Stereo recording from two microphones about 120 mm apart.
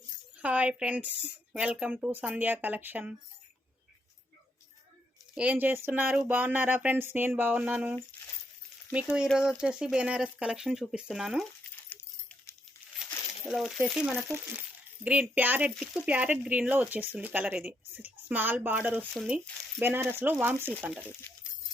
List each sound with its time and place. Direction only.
0.3 s speech: 10° right (ahead or behind)
5.3 s speech: 10° right (ahead or behind)
12.8 s crumpling: 20° right (ahead or behind)
13.4 s speech: centre (ahead or behind)
14.2 s speech: 20° right (ahead or behind)
19.1 s speech: centre (ahead or behind)
19.8 s speech: 20° right (ahead or behind)